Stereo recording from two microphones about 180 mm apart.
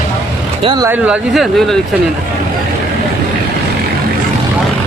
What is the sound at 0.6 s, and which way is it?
Speech, 20° right (ahead or behind).